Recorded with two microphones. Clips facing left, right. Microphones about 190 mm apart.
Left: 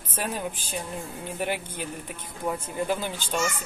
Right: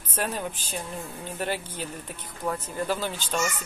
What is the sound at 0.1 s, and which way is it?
Speech, 10° left (ahead or behind).